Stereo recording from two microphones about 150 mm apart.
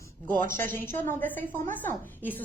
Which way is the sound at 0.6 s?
60° right (ahead or behind).